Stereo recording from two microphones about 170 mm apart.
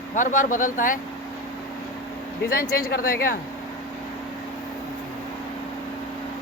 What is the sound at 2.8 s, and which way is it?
Speech, 65° left (ahead or behind).